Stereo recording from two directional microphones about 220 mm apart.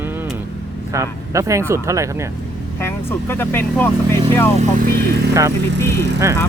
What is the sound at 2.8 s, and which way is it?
Speech, 10° left (ahead or behind).